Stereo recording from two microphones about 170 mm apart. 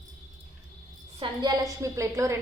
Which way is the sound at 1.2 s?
25° right (ahead or behind).